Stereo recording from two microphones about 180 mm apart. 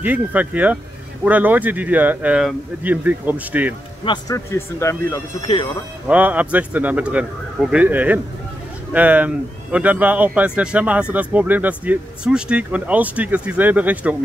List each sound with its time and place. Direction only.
0.0 s speech: 10° right (ahead or behind)
4.0 s speech: 20° left (ahead or behind)
6.0 s speech: 10° right (ahead or behind)